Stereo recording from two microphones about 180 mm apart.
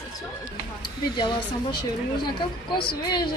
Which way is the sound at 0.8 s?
25° left (ahead or behind).